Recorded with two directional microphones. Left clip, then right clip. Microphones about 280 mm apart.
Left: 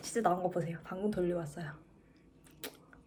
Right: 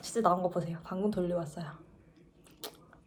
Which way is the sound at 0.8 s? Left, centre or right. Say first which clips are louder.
Right 2 dB; centre.